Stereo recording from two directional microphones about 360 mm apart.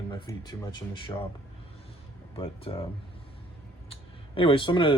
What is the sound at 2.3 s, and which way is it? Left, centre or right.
Speech, centre.